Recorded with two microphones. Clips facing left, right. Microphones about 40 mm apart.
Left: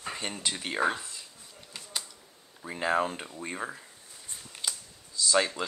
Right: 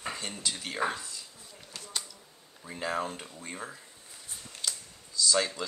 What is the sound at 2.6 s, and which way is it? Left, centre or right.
Speech, left.